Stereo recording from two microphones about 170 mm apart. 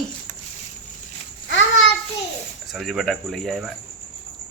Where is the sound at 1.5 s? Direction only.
90° left.